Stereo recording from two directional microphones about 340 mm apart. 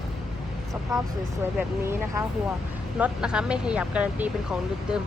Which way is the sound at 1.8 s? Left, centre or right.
Centre.